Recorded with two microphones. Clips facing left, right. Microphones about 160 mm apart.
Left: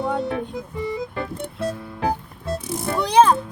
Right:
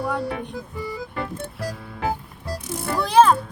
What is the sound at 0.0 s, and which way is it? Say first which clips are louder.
Music: left 2 dB; 20° left (ahead or behind).